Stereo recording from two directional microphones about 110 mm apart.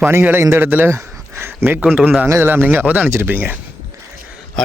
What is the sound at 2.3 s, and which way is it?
A man's voice, 20° right (ahead or behind).